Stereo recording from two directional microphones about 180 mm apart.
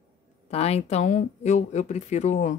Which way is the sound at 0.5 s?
35° left (ahead or behind).